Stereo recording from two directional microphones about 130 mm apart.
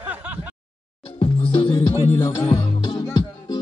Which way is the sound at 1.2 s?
45° left (ahead or behind).